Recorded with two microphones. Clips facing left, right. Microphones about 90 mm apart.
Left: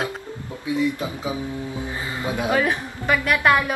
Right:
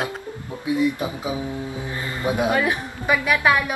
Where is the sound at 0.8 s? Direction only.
20° right (ahead or behind).